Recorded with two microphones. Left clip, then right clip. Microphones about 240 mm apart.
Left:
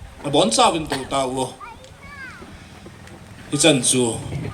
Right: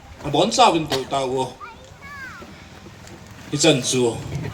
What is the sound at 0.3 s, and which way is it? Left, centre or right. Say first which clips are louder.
Speech: right 1 dB; left.